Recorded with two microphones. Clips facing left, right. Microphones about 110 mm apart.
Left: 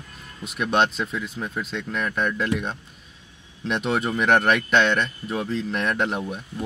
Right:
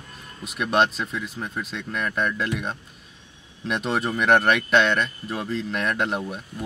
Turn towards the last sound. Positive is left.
turn(degrees=0)  # may be behind; listen again after turning